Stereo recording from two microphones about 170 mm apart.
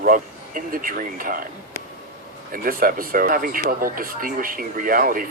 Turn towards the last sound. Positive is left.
turn(degrees=-55)  # may be behind; listen again after turning